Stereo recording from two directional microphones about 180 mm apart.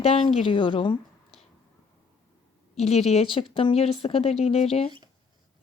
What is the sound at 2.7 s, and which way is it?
A woman's voice, 35° left (ahead or behind).